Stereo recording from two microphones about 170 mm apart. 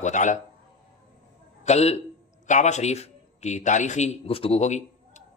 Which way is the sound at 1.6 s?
40° left (ahead or behind).